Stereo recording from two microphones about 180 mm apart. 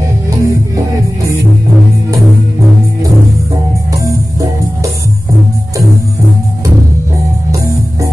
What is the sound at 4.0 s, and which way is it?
Music, 20° right (ahead or behind).